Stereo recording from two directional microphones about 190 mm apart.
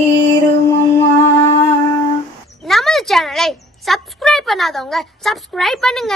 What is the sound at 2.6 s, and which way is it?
A woman's voice, centre (ahead or behind).